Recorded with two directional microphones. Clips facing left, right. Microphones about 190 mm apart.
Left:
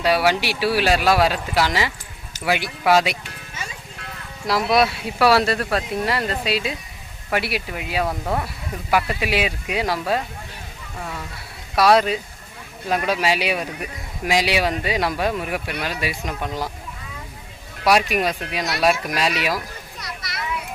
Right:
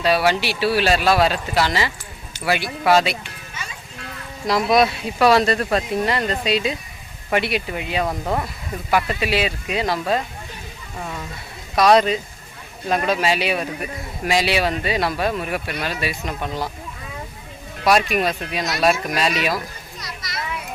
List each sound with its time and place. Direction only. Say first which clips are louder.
0.0 s speech: even; 10° left (ahead or behind)
4.4 s speech: right 2 dB; 5° left (ahead or behind)
8.9 s speech: right 1 dB; 10° left (ahead or behind)
11.7 s speech: right 1 dB; 5° left (ahead or behind)
17.8 s speech: right 1 dB; 10° left (ahead or behind)
20.0 s a sound: right 2 dB; 60° left (ahead or behind)